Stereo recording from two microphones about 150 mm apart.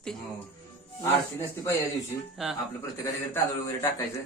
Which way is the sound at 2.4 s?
Centre (ahead or behind).